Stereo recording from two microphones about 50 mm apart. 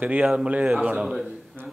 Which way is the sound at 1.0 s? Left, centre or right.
Centre.